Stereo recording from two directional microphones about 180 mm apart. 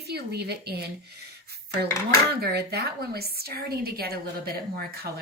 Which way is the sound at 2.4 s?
60° right (ahead or behind).